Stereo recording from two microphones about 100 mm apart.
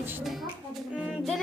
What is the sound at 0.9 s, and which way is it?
Music, 5° right (ahead or behind).